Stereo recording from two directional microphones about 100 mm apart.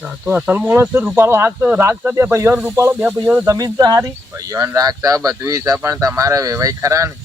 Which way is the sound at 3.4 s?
40° right (ahead or behind).